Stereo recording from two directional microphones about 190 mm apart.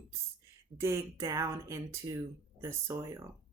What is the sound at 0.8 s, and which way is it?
Speech, 15° right (ahead or behind).